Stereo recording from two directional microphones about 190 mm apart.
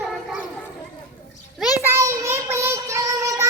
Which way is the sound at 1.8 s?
15° right (ahead or behind).